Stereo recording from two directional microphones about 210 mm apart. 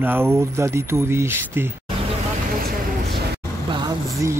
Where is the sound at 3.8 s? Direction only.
15° right (ahead or behind).